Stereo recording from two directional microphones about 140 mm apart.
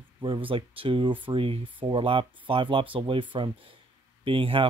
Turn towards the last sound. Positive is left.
turn(degrees=-40)  # may be behind; listen again after turning